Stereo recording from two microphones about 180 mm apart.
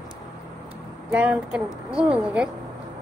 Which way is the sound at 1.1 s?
5° right (ahead or behind).